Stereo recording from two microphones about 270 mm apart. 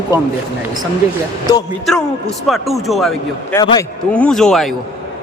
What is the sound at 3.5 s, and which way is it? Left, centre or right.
Speech, centre.